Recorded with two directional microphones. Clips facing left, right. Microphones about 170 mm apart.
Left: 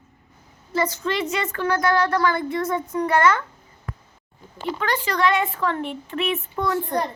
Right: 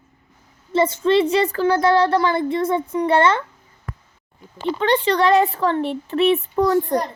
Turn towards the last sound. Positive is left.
turn(degrees=-35)  # may be behind; listen again after turning